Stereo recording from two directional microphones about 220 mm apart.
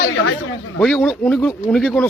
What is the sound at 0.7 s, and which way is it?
Speech, centre (ahead or behind).